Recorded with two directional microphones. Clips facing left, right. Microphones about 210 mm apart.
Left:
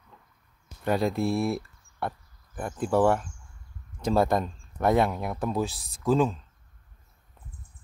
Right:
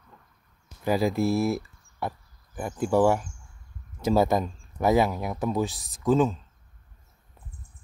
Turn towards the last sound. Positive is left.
turn(degrees=0)  # may be behind; listen again after turning